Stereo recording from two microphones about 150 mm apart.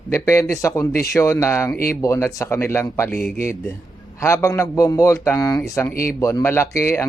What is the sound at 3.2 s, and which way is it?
Speech, 90° left.